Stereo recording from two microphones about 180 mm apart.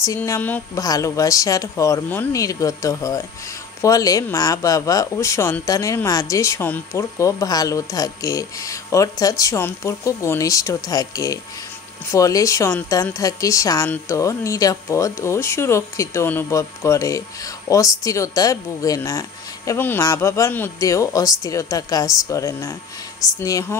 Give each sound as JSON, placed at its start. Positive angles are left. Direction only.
{"t": 0.0, "sound": "speech", "side_deg": 15}